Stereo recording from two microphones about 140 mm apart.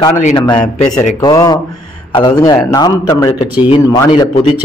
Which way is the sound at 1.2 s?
30° left (ahead or behind).